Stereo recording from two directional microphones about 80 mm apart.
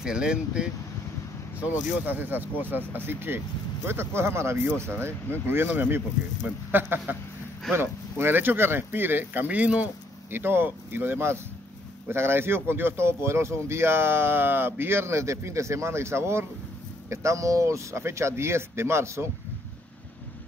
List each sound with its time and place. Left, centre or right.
0.0 s speech: centre
2.0 s speech: right